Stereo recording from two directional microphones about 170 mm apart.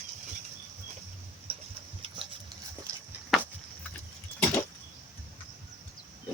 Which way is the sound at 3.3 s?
Centre (ahead or behind).